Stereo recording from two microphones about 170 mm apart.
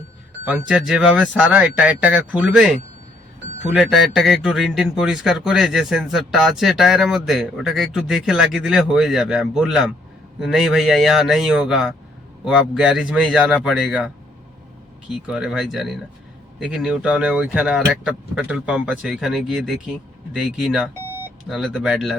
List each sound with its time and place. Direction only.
0.7 s a man's voice: 5° right (ahead or behind)
15.3 s a man's voice: 5° right (ahead or behind)